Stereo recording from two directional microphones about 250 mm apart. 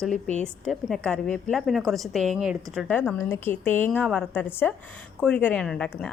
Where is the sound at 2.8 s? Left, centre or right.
Centre.